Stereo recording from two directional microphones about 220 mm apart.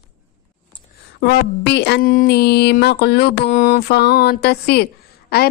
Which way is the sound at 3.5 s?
35° left (ahead or behind).